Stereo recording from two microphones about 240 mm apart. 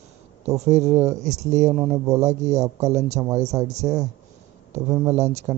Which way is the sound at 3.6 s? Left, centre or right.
Right.